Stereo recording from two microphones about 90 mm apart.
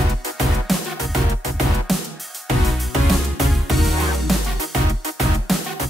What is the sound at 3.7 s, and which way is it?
Music, centre (ahead or behind).